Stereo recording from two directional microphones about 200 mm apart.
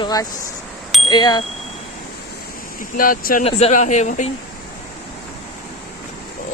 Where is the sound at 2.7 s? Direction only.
45° left (ahead or behind).